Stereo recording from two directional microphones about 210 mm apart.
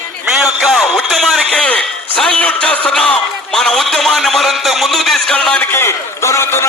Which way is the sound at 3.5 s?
Centre (ahead or behind).